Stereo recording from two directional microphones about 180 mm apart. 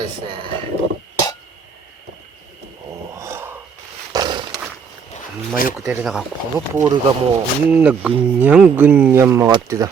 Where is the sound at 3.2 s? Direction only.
15° right (ahead or behind).